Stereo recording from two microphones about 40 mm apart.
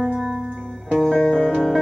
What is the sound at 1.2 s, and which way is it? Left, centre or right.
Music, centre.